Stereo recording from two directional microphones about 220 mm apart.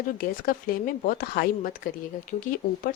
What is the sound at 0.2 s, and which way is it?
Speech, 40° left (ahead or behind).